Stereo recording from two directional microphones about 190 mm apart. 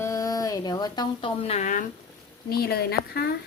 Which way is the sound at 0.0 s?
15° left (ahead or behind).